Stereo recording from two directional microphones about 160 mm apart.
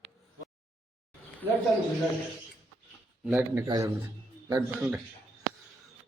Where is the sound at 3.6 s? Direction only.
20° right (ahead or behind).